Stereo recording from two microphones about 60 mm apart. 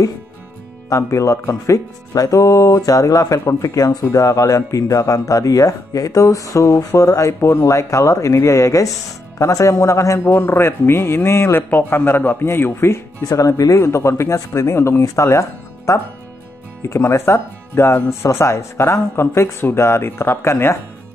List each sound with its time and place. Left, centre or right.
0.8 s speech: left
3.3 s speech: left
3.7 s speech: left
7.3 s speech: left
10.2 s speech: left
11.7 s speech: left
13.2 s speech: left
13.7 s speech: left